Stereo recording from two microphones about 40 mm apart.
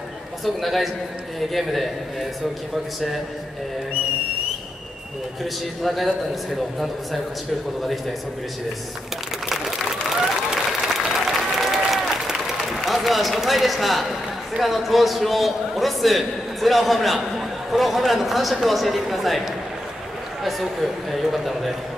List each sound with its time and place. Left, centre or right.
0.6 s a man's voice: centre
5.4 s a man's voice: centre
10.0 s applause: centre
12.8 s a man's voice: centre